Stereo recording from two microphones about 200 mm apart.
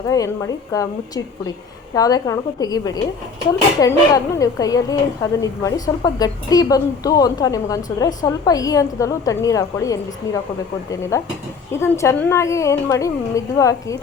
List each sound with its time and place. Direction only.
0.1 s speech: 15° left (ahead or behind)